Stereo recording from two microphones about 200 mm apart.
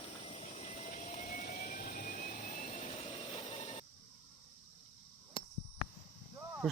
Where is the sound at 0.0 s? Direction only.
30° left (ahead or behind).